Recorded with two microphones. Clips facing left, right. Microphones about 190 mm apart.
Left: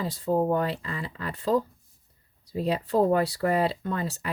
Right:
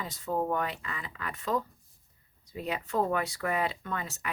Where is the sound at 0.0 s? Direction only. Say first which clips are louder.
Left 7 dB; 35° left (ahead or behind).